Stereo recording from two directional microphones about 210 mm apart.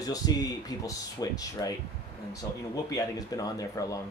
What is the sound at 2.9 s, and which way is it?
Speech, 15° left (ahead or behind).